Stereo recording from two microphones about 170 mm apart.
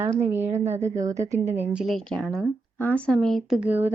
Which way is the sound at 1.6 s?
5° right (ahead or behind).